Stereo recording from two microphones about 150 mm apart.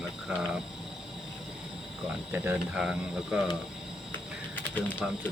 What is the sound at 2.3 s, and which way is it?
Speech, 15° right (ahead or behind).